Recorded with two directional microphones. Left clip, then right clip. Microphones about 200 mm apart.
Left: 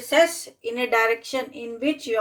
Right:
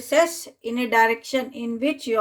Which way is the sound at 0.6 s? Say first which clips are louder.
Right 2 dB; 35° right (ahead or behind).